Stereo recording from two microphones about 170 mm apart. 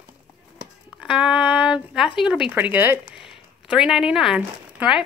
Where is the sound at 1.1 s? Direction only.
5° right (ahead or behind).